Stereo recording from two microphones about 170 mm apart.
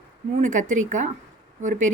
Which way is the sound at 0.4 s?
50° right (ahead or behind).